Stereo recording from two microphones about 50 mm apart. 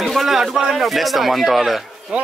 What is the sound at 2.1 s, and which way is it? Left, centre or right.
Speech, centre.